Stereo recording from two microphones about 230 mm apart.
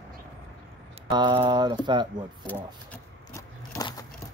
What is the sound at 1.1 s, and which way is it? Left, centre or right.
Speech, centre.